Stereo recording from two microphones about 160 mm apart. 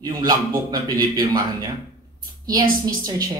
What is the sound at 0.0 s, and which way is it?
Speech, 25° right (ahead or behind).